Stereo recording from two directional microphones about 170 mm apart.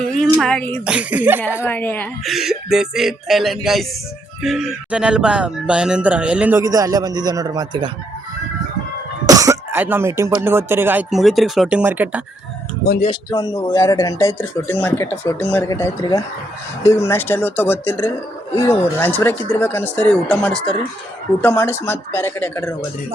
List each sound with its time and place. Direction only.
0.0 s a sound: 5° left (ahead or behind)
0.3 s speech: 5° left (ahead or behind)
0.9 s speech: 10° right (ahead or behind)
1.6 s speech: 10° left (ahead or behind)
2.2 s music: centre (ahead or behind)
4.4 s speech: centre (ahead or behind); by 7.9 s 25° right (ahead or behind)
9.2 s speech: 20° right (ahead or behind)
11.1 s music: centre (ahead or behind)
13.1 s speech: 25° left (ahead or behind)